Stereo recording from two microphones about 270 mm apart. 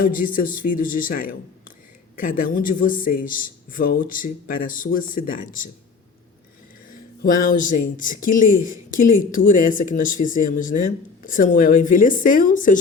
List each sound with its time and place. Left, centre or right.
0.0 s speech: left
7.2 s speech: left